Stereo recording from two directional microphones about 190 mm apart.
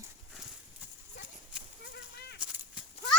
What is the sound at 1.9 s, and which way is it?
Gunshot, 60° left (ahead or behind).